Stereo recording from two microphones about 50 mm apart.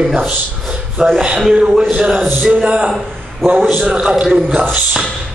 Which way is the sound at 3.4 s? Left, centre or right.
Centre.